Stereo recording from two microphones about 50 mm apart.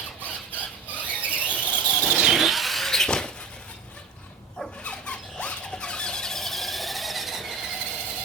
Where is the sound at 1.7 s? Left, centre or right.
Left.